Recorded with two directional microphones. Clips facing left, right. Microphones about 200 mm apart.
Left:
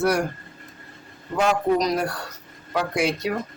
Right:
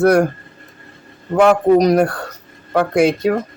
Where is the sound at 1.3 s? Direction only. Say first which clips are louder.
Right 9 dB; 55° right (ahead or behind).